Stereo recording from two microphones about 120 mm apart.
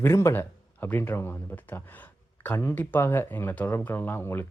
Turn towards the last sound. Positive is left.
turn(degrees=20)  # may be behind; listen again after turning